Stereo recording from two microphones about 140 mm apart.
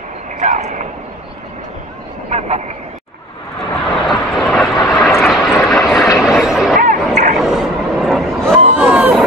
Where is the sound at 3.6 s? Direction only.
Centre (ahead or behind).